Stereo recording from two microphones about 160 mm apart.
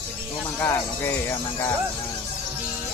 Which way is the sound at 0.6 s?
15° left (ahead or behind).